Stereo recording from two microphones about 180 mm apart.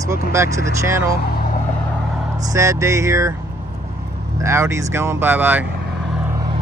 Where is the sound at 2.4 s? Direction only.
15° right (ahead or behind).